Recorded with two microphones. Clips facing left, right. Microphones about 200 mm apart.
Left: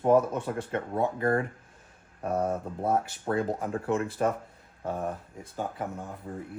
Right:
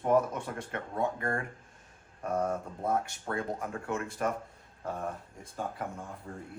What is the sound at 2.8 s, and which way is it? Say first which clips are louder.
Speech: left 4 dB; 30° left (ahead or behind).